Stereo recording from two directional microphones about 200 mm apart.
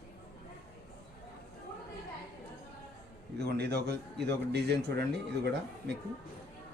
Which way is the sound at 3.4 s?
55° right (ahead or behind).